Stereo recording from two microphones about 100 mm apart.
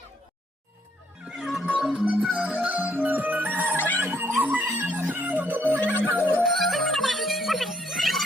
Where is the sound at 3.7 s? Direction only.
20° left (ahead or behind).